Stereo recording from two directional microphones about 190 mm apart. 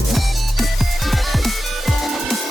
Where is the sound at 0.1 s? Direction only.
Centre (ahead or behind).